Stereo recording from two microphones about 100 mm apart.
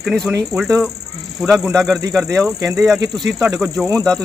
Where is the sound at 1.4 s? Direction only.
Centre (ahead or behind).